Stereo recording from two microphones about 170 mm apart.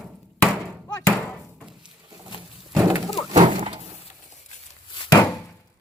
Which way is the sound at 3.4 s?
30° right (ahead or behind).